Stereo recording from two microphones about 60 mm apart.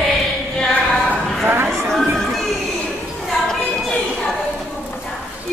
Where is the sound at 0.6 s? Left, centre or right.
Centre.